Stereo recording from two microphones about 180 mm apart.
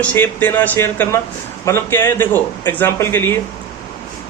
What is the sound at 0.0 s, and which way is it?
A man's voice, 10° left (ahead or behind).